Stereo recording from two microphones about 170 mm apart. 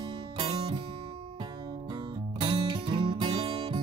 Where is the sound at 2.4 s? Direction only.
25° right (ahead or behind).